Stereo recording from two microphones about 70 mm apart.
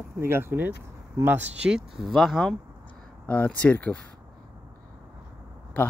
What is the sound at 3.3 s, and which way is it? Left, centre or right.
Speech, centre.